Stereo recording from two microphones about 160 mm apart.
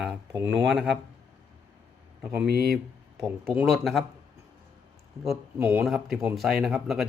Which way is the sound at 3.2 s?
Centre (ahead or behind).